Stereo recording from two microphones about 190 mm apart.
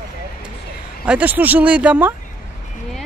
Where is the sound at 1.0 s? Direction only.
10° right (ahead or behind).